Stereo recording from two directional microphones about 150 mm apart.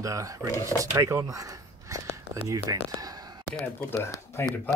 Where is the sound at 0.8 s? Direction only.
20° right (ahead or behind).